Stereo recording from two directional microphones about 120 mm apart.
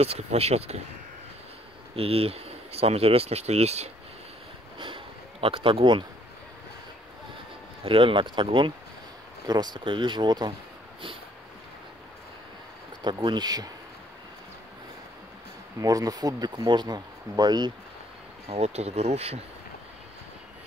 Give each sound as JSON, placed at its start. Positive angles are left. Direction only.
{"t": 0.0, "sound": "speech", "side_deg": -60}
{"t": 2.0, "sound": "speech", "side_deg": -55}
{"t": 4.7, "sound": "a sound", "side_deg": -45}
{"t": 7.8, "sound": "speech", "side_deg": -50}
{"t": 13.0, "sound": "speech", "side_deg": -40}
{"t": 15.8, "sound": "speech", "side_deg": -30}
{"t": 18.5, "sound": "speech", "side_deg": -60}